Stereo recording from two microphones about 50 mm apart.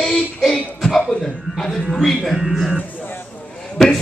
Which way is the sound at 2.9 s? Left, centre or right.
Left.